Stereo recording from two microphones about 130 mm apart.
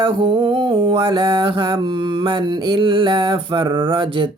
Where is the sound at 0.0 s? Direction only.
40° right (ahead or behind).